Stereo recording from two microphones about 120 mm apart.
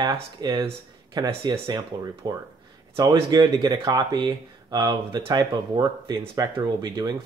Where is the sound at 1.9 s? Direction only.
30° right (ahead or behind).